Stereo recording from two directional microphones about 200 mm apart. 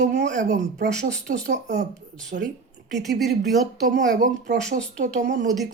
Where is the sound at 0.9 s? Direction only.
40° right (ahead or behind).